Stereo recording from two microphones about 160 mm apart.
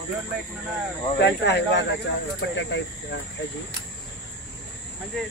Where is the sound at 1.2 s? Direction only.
90° left.